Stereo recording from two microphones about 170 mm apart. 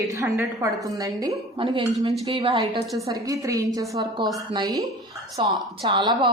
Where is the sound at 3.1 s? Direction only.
20° right (ahead or behind).